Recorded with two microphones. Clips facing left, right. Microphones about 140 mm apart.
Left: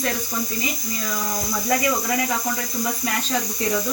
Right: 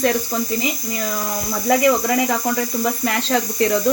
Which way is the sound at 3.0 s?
70° right (ahead or behind).